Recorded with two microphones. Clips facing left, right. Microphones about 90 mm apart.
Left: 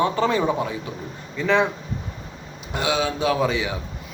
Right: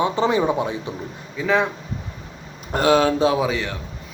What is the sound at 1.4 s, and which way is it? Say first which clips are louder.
Speech: even; 5° right (ahead or behind).